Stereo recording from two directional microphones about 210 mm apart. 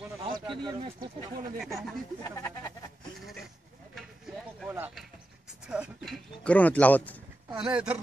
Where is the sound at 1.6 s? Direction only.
Centre (ahead or behind).